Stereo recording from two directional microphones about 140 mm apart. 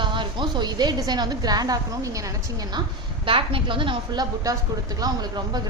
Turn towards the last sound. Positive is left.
turn(degrees=-30)  # may be behind; listen again after turning